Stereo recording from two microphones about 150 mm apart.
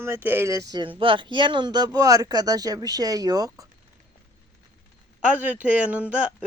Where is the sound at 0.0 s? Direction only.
15° right (ahead or behind).